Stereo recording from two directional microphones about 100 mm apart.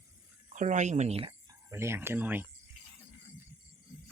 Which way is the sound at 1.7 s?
25° right (ahead or behind).